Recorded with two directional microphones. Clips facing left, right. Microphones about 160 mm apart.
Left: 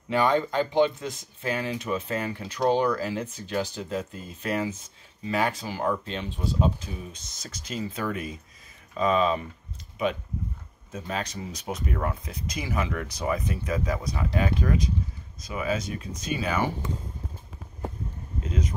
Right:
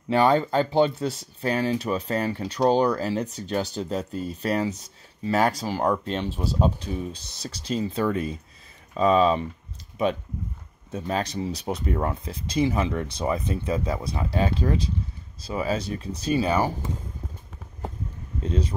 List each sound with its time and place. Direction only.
0.1 s speech: 35° right (ahead or behind)
10.9 s speech: 35° right (ahead or behind)
18.4 s speech: 30° right (ahead or behind)